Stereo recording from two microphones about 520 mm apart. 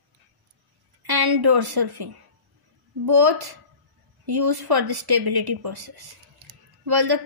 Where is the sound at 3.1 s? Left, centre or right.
Right.